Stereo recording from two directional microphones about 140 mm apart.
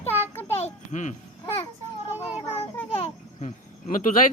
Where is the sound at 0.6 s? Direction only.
60° left (ahead or behind).